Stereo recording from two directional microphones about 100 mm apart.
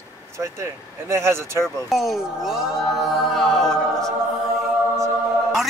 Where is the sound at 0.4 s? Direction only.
25° right (ahead or behind).